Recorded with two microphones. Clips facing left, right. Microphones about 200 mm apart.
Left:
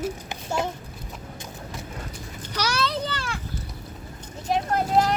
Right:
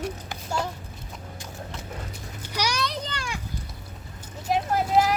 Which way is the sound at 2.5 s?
15° right (ahead or behind).